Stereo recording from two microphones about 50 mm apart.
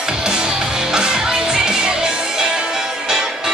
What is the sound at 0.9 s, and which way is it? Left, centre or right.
Music, centre.